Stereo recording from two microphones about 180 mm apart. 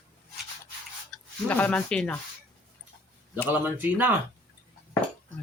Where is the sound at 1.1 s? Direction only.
Centre (ahead or behind).